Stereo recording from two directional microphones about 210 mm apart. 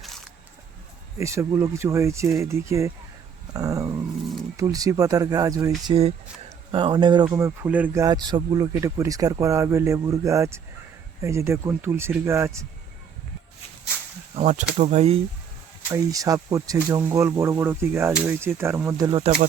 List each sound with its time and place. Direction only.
1.2 s speech: 15° right (ahead or behind)
5.9 s speech: 30° right (ahead or behind); by 12.6 s 15° right (ahead or behind)
14.8 s speech: 35° right (ahead or behind)
15.9 s speech: 15° right (ahead or behind)
19.2 s speech: 35° right (ahead or behind)